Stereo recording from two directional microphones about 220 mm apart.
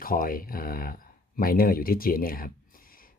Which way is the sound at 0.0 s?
40° left (ahead or behind).